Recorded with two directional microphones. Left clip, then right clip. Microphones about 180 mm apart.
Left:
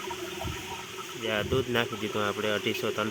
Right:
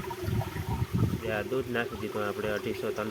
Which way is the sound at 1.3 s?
25° left (ahead or behind).